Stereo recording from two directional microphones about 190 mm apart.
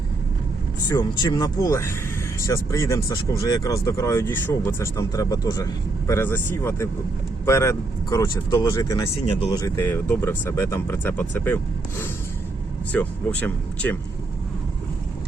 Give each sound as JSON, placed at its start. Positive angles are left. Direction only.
{"t": 0.9, "sound": "speech", "side_deg": 20}